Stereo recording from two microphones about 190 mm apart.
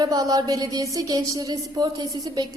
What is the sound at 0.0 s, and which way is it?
A woman's voice, 20° right (ahead or behind).